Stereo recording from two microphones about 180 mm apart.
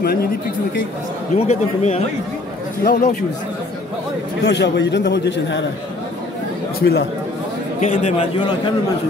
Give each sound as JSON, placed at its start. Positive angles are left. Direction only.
{"t": 1.5, "sound": "a man's voice", "side_deg": 40}
{"t": 4.5, "sound": "a man's voice", "side_deg": 75}
{"t": 6.8, "sound": "speech", "side_deg": 60}
{"t": 7.8, "sound": "a man's voice", "side_deg": 40}